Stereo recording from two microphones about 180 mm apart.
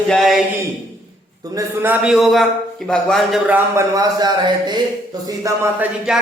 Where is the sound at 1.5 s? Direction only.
10° right (ahead or behind).